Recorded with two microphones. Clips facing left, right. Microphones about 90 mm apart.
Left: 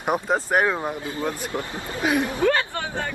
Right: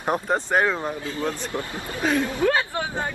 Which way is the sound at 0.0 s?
10° left (ahead or behind).